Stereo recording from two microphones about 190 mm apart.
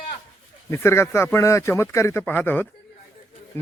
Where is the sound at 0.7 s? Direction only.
15° left (ahead or behind).